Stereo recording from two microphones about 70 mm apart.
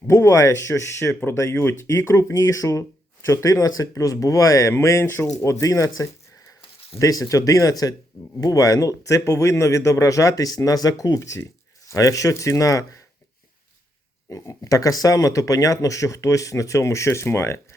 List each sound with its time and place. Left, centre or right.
0.1 s speech: left
4.7 s speech: left
11.2 s speech: left
11.9 s speech: left
14.3 s speech: left